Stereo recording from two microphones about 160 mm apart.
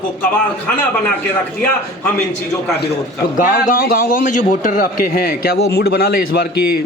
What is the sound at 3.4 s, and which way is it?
A man's voice, 60° left (ahead or behind).